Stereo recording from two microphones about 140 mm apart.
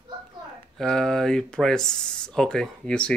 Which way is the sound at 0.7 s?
5° left (ahead or behind).